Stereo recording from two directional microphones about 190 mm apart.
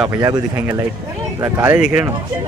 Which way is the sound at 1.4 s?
10° right (ahead or behind).